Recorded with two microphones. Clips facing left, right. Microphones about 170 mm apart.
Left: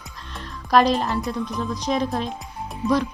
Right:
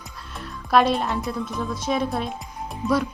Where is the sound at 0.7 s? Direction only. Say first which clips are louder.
Left 1 dB; 5° right (ahead or behind).